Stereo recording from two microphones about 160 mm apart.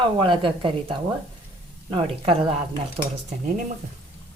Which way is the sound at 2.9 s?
45° right (ahead or behind).